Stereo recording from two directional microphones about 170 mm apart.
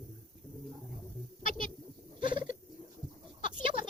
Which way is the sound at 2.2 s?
30° right (ahead or behind).